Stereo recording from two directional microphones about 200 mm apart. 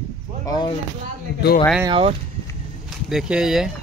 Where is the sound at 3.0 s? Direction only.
5° right (ahead or behind).